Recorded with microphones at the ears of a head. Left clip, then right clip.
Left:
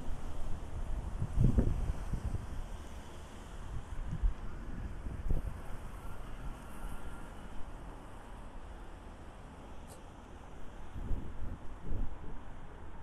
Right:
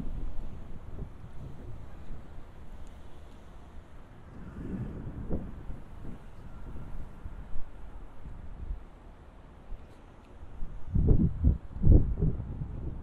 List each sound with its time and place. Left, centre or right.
1.2 s wind: left
4.6 s vehicle: right
10.9 s a sound: right